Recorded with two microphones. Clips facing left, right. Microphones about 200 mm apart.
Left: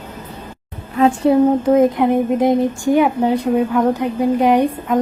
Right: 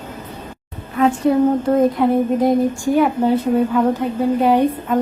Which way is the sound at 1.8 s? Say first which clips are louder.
Left 1 dB; 20° left (ahead or behind).